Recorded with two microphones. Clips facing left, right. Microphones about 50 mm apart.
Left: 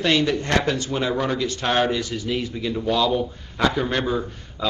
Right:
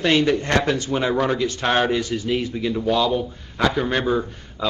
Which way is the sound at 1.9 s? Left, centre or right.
Right.